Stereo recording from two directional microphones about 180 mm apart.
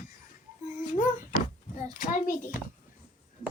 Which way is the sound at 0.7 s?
45° left (ahead or behind).